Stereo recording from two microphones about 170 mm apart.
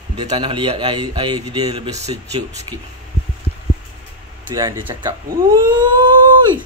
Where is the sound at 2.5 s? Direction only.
20° right (ahead or behind).